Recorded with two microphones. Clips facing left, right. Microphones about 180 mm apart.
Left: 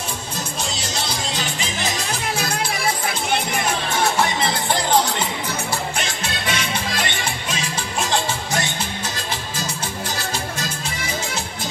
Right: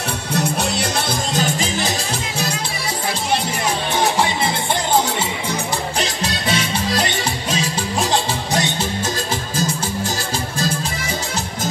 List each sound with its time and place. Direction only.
0.3 s music: 65° right (ahead or behind); by 1.9 s 40° right (ahead or behind)
5.9 s music: 35° right (ahead or behind)